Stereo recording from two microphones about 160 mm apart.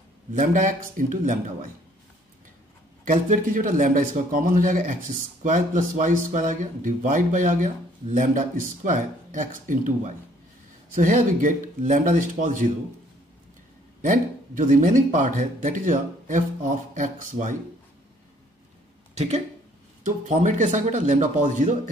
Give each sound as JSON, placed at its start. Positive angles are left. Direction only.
{"t": 0.3, "sound": "speech", "side_deg": -55}
{"t": 3.1, "sound": "a man's voice", "side_deg": -55}
{"t": 14.0, "sound": "speech", "side_deg": -55}
{"t": 19.1, "sound": "speech", "side_deg": -40}
{"t": 20.0, "sound": "speech", "side_deg": -50}